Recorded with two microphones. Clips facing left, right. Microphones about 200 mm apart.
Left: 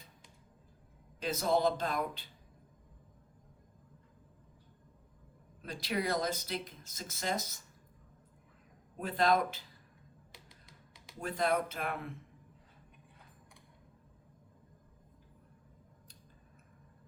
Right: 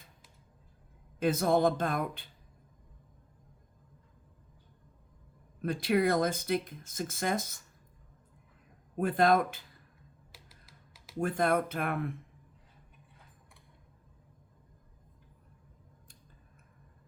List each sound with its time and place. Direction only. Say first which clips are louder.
1.2 s speech: right 4 dB; 55° right (ahead or behind)
5.6 s speech: right 8 dB; 55° right (ahead or behind)
9.0 s speech: right 4 dB; 50° right (ahead or behind)
10.3 s typing: even; 5° right (ahead or behind)
11.2 s speech: right 4 dB; 50° right (ahead or behind)